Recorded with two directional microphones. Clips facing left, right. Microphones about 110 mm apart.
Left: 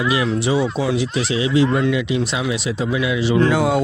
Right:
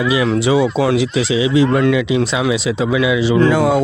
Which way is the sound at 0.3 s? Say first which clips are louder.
Right 5 dB; 90° right.